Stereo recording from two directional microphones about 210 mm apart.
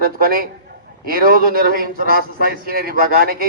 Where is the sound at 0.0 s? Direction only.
45° right (ahead or behind).